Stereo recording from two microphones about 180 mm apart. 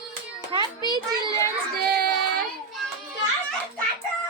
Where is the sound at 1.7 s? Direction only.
60° right (ahead or behind).